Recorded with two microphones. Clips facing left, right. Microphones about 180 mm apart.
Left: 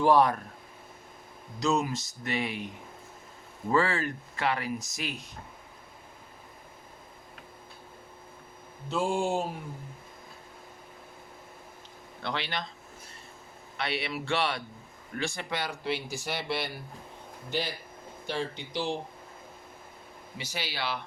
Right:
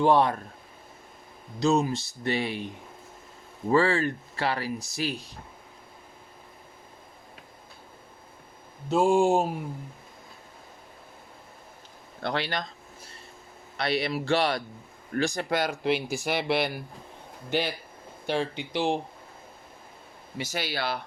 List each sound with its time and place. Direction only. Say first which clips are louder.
0.0 s speech: right 1 dB; 25° right (ahead or behind)
1.5 s speech: right 4 dB; 30° right (ahead or behind)
3.7 s speech: right 4 dB; 30° right (ahead or behind)
8.9 s speech: right 7 dB; 45° right (ahead or behind)
12.2 s speech: right 5 dB; 45° right (ahead or behind)
13.7 s speech: right 5 dB; 40° right (ahead or behind)
16.0 s speech: right 6 dB; 10° right (ahead or behind)
16.2 s speech: right 8 dB; 65° right (ahead or behind)
18.3 s speech: right 5 dB; 60° right (ahead or behind)
20.4 s speech: right 5 dB; 50° right (ahead or behind)